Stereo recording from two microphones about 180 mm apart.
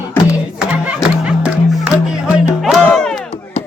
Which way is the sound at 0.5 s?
5° right (ahead or behind).